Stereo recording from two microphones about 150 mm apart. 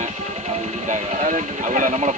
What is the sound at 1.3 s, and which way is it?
Speech, 60° right (ahead or behind).